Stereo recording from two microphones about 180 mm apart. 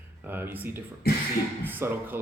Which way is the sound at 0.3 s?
10° right (ahead or behind).